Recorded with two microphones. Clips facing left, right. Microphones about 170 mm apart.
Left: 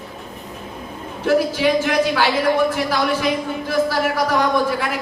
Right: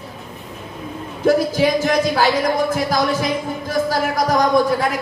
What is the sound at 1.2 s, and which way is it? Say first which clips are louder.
Speech: right 2 dB; 40° right (ahead or behind).